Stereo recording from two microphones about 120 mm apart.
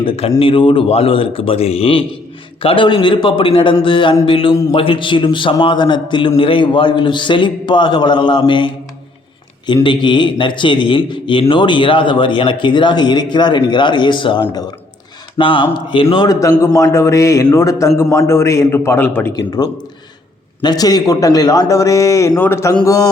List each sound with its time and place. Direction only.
0.0 s a man's voice: 55° left (ahead or behind)
9.8 s a man's voice: 40° left (ahead or behind)
16.3 s a man's voice: 25° left (ahead or behind)
19.3 s a man's voice: 35° left (ahead or behind)
22.7 s speech: 30° left (ahead or behind)